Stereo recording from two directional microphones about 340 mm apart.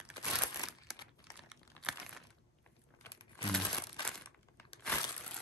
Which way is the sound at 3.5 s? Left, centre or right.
Centre.